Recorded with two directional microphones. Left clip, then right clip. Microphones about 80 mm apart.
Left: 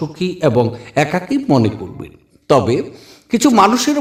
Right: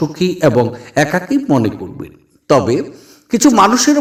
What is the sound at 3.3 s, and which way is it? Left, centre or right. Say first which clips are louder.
Speech: right 2 dB; right.